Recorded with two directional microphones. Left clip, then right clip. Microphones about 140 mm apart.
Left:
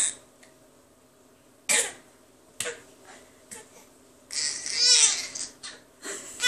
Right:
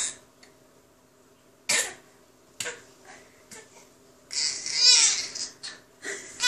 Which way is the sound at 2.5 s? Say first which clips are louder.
Left 1 dB; 10° left (ahead or behind).